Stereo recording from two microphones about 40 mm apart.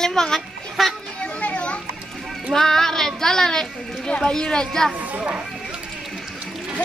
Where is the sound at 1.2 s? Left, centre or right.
Left.